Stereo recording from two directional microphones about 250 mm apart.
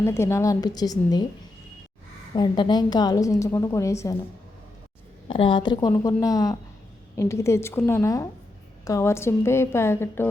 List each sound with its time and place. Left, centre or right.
0.0 s a woman's voice: centre
2.3 s a woman's voice: centre
5.3 s a woman's voice: centre